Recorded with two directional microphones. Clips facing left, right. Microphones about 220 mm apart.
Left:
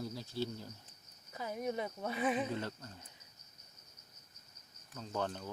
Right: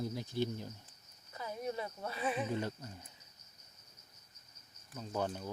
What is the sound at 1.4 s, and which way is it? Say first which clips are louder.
Speech: left 2 dB; 25° left (ahead or behind).